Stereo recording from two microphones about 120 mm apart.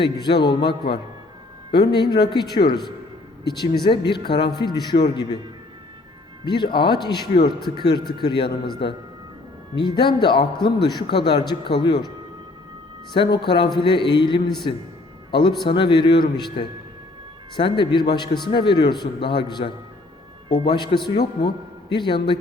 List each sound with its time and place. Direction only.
0.0 s a man's voice: 40° left (ahead or behind)
6.4 s a man's voice: 40° left (ahead or behind)
9.8 s a man's voice: 40° left (ahead or behind)
13.1 s a man's voice: 40° left (ahead or behind)